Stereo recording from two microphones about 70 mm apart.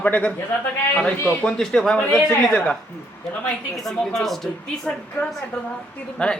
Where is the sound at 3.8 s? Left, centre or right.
Centre.